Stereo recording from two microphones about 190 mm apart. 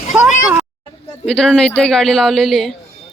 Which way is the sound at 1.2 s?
5° left (ahead or behind).